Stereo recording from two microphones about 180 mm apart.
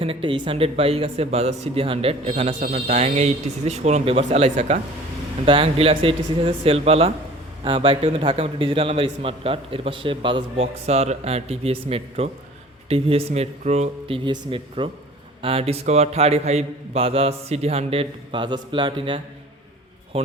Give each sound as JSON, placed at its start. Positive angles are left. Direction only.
{"t": 0.0, "sound": "speech", "side_deg": -30}
{"t": 14.3, "sound": "a man's voice", "side_deg": -30}